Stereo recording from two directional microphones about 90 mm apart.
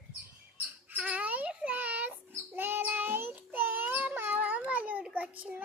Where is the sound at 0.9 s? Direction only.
15° right (ahead or behind).